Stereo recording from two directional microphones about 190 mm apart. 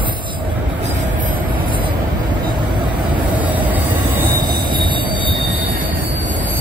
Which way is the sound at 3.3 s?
10° right (ahead or behind).